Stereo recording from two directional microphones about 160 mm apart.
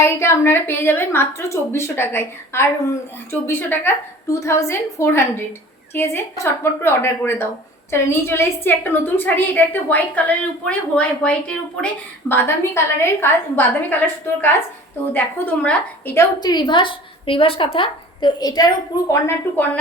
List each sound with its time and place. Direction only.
0.0 s a woman's voice: 15° left (ahead or behind)
16.4 s a woman's voice: 25° left (ahead or behind)